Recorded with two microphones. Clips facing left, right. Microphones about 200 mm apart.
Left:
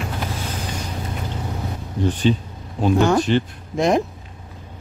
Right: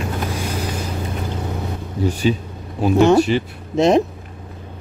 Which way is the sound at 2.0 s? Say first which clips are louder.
Even; 10° right (ahead or behind).